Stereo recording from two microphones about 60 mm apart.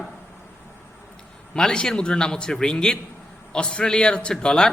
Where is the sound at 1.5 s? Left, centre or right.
Centre.